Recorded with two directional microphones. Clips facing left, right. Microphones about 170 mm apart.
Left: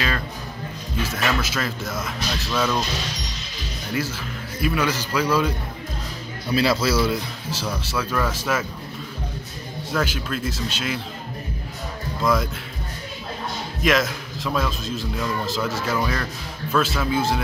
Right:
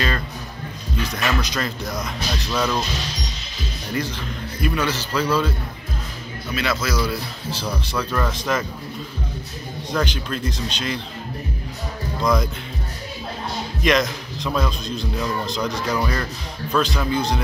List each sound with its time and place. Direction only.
1.0 s a man's voice: 5° left (ahead or behind)
4.6 s speech: 5° left (ahead or behind)
6.5 s a man's voice: 35° left (ahead or behind)
7.9 s a man's voice: 5° left (ahead or behind)
9.9 s a man's voice: 5° left (ahead or behind)
12.2 s speech: centre (ahead or behind)
13.8 s a man's voice: 5° left (ahead or behind)